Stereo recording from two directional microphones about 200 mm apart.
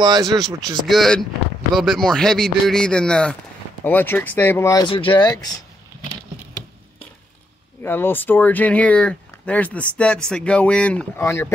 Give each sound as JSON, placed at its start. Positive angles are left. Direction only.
{"t": 0.0, "sound": "speech", "side_deg": -20}
{"t": 0.8, "sound": "speech", "side_deg": 0}
{"t": 7.8, "sound": "speech", "side_deg": 10}